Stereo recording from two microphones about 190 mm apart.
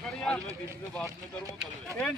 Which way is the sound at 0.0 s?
5° left (ahead or behind).